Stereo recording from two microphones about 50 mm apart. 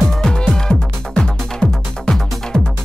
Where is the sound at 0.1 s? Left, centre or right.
Centre.